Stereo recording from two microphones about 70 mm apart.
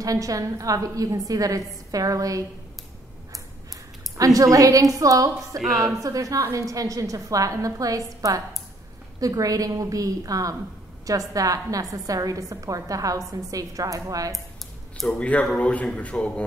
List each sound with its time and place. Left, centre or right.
0.0 s a woman's voice: right
4.2 s a woman's voice: right
5.8 s a woman's voice: centre
6.0 s a woman's voice: right
15.0 s a man's voice: centre